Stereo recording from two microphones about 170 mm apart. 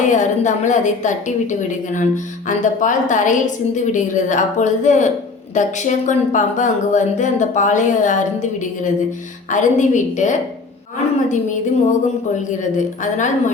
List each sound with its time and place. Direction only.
0.0 s a woman's voice: 45° left (ahead or behind)